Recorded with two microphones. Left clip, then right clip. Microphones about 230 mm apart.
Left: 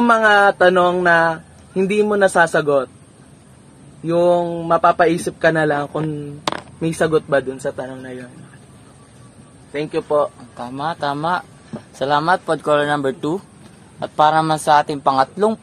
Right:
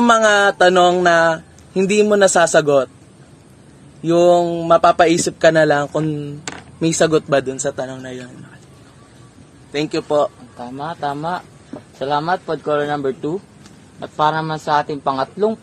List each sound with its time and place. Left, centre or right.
0.0 s speech: right
4.0 s speech: right
9.7 s speech: right
10.6 s a man's voice: left